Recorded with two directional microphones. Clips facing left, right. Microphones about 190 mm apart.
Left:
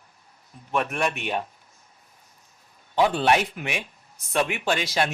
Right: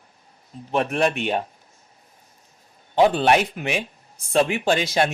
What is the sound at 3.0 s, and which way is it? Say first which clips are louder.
Speech: right 4 dB; 25° right (ahead or behind).